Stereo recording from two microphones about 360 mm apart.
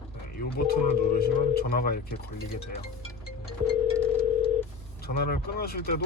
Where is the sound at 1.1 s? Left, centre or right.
Left.